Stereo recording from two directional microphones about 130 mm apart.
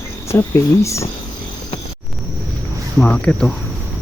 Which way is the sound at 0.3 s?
20° left (ahead or behind).